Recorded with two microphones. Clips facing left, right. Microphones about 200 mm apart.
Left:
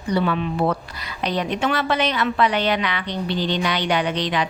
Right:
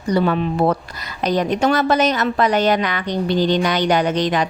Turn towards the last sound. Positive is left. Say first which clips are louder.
# right 4 dB
turn(degrees=-45)  # may be behind; listen again after turning